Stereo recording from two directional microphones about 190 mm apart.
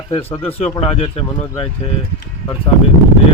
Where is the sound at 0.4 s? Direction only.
30° left (ahead or behind).